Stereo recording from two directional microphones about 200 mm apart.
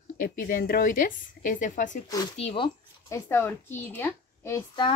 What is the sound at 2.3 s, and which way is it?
Speech, 30° left (ahead or behind).